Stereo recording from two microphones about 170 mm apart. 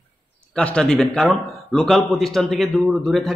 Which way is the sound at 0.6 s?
5° left (ahead or behind).